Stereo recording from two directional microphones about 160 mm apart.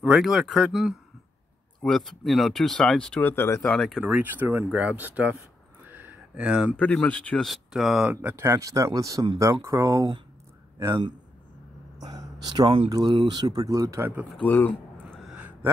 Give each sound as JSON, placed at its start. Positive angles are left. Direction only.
{"t": 0.0, "sound": "speech", "side_deg": 0}
{"t": 3.7, "sound": "speech", "side_deg": 0}
{"t": 4.0, "sound": "speech", "side_deg": -10}
{"t": 5.9, "sound": "a sound", "side_deg": -10}
{"t": 6.8, "sound": "speech", "side_deg": 10}
{"t": 12.0, "sound": "a sound", "side_deg": -25}
{"t": 12.6, "sound": "speech", "side_deg": -35}
{"t": 12.9, "sound": "speech", "side_deg": -25}
{"t": 14.3, "sound": "speech", "side_deg": 10}
{"t": 15.1, "sound": "a sound", "side_deg": -5}